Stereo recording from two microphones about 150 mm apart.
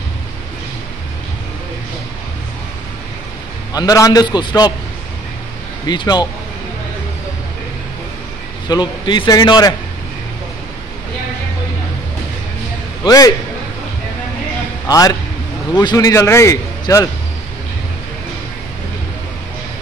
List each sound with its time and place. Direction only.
3.7 s a man's voice: 25° left (ahead or behind)
5.9 s a man's voice: 30° left (ahead or behind)
8.6 s a man's voice: 30° left (ahead or behind)
13.0 s a man's voice: 25° left (ahead or behind)
14.9 s a man's voice: 25° left (ahead or behind)